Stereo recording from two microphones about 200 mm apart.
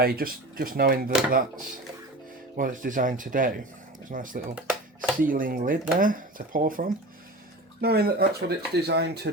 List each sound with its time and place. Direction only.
0.0 s speech: 50° right (ahead or behind)
4.5 s music: 5° right (ahead or behind)
5.2 s speech: 45° right (ahead or behind)